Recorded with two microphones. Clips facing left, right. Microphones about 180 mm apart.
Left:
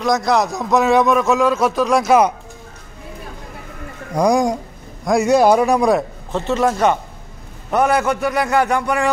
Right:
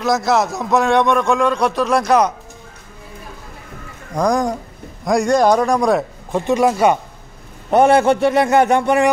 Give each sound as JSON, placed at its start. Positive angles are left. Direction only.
{"t": 0.0, "sound": "a man's voice", "side_deg": 0}
{"t": 4.1, "sound": "a man's voice", "side_deg": 10}
{"t": 6.3, "sound": "speech", "side_deg": -15}
{"t": 7.7, "sound": "a man's voice", "side_deg": -30}